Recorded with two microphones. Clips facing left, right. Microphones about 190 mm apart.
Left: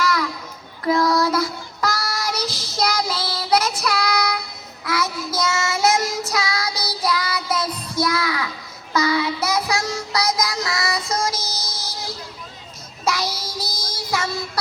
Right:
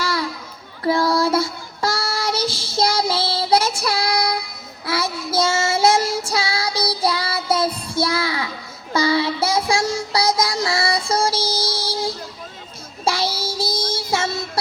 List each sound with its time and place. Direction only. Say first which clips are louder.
0.0 s children playing: left 2 dB; 30° right (ahead or behind)
0.9 s child singing: right 1 dB; 30° right (ahead or behind)
13.1 s child singing: right 2 dB; 30° right (ahead or behind)